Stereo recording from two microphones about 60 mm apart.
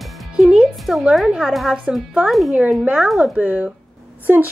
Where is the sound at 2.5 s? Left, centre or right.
Right.